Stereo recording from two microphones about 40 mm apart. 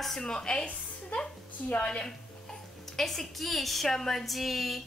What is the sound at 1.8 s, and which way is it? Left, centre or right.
Speech, left.